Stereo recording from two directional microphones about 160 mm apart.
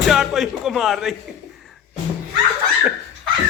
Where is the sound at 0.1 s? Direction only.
Centre (ahead or behind).